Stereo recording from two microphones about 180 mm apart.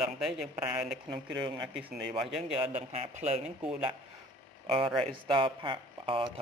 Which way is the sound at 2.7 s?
40° right (ahead or behind).